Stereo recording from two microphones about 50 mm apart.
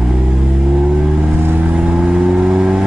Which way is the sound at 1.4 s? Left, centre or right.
Right.